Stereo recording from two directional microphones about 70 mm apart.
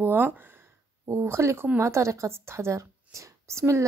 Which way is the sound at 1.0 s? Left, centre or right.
Right.